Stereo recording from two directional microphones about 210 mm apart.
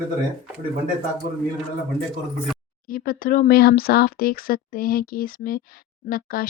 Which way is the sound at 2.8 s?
45° left (ahead or behind).